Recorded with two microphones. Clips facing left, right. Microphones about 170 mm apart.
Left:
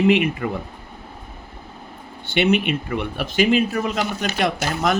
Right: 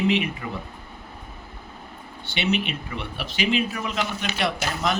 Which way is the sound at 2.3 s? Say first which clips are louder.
Left 7 dB; 55° left (ahead or behind).